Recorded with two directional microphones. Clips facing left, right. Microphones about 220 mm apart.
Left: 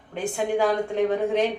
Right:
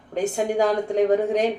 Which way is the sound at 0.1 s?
40° right (ahead or behind).